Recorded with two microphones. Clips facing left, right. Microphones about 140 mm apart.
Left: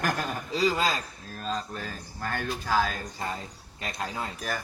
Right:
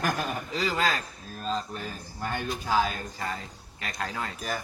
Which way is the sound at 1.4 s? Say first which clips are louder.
Right 1 dB; 5° right (ahead or behind).